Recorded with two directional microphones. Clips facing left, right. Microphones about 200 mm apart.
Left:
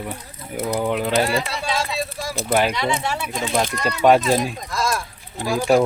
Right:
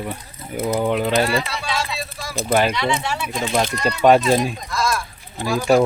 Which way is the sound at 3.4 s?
5° right (ahead or behind).